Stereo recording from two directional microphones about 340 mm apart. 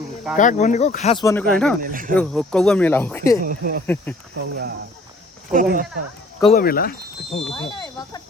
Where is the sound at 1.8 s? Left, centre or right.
Right.